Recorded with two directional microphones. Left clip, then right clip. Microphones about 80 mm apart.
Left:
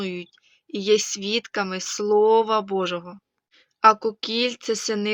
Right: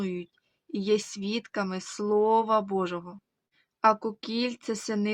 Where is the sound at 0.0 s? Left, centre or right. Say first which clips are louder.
Left 4 dB; right.